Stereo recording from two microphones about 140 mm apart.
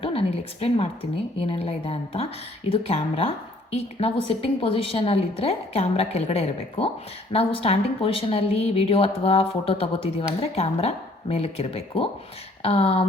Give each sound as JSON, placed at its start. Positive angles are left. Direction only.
{"t": 0.0, "sound": "a woman's voice", "side_deg": 45}